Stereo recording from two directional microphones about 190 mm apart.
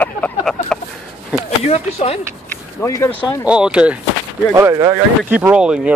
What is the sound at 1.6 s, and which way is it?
Speech, 35° left (ahead or behind).